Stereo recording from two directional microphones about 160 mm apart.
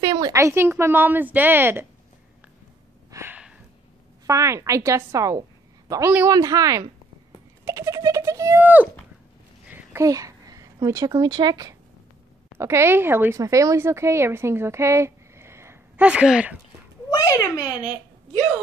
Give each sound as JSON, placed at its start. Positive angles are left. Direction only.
{"t": 0.0, "sound": "a woman's voice", "side_deg": -25}
{"t": 3.1, "sound": "a sound", "side_deg": -15}
{"t": 4.3, "sound": "a woman's voice", "side_deg": -20}
{"t": 7.6, "sound": "a sound", "side_deg": -15}
{"t": 10.0, "sound": "a woman's voice", "side_deg": -20}
{"t": 17.1, "sound": "a child's voice", "side_deg": 20}